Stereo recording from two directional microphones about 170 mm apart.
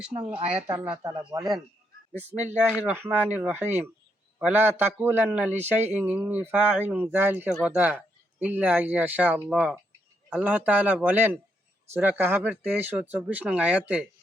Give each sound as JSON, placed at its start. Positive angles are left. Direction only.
{"t": 0.7, "sound": "speech", "side_deg": -20}
{"t": 2.3, "sound": "a man's voice", "side_deg": -10}